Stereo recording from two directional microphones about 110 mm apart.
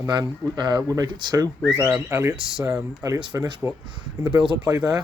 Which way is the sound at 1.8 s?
15° right (ahead or behind).